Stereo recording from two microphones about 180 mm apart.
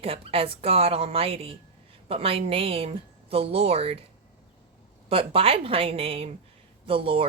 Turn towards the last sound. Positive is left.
turn(degrees=-30)  # may be behind; listen again after turning